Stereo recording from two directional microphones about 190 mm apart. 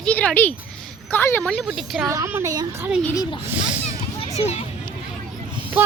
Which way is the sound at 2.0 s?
15° right (ahead or behind).